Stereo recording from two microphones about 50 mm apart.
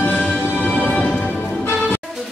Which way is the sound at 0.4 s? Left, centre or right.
Left.